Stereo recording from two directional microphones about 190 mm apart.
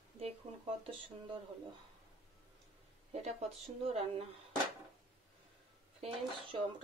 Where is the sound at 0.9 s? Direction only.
25° right (ahead or behind).